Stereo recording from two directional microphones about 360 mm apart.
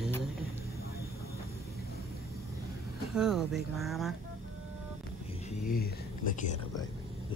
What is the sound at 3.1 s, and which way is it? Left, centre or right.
Speech, centre.